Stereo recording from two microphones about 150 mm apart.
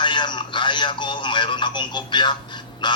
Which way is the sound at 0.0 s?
30° left (ahead or behind).